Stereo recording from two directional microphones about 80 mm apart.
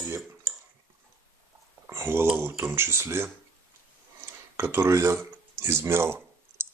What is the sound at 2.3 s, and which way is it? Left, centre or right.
Speech, right.